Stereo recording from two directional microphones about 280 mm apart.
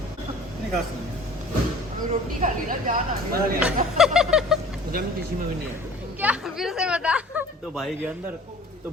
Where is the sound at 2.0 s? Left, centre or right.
Right.